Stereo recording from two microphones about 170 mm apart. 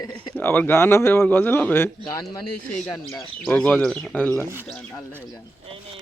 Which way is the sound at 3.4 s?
5° left (ahead or behind).